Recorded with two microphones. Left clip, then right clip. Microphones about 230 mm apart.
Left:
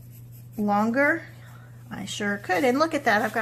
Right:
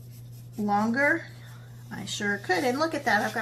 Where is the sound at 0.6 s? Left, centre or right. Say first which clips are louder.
Left 2 dB; left.